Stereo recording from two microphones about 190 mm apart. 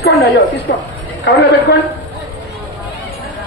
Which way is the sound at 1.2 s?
65° left (ahead or behind).